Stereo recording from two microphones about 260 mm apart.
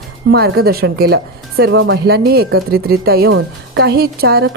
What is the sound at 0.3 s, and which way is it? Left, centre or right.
A woman's voice, right.